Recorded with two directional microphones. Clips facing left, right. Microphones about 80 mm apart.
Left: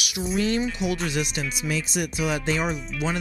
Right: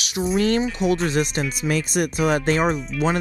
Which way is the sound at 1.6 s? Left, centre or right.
Right.